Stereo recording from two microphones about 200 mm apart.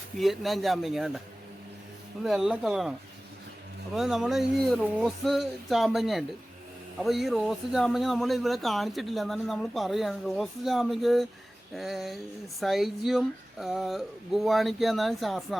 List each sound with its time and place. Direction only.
0.2 s speech: centre (ahead or behind)
2.2 s speech: centre (ahead or behind)
3.9 s speech: centre (ahead or behind)